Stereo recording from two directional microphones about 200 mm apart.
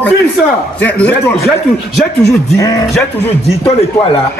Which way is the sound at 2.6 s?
15° left (ahead or behind).